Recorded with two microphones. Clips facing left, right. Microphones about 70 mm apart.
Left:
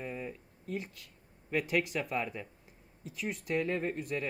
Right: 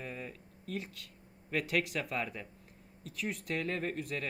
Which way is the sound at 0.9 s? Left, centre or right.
Centre.